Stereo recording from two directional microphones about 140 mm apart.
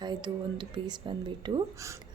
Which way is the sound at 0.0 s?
30° right (ahead or behind).